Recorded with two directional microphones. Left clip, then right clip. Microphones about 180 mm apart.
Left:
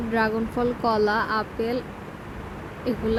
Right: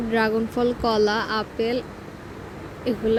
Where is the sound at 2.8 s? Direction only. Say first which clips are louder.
Right 3 dB; 10° right (ahead or behind).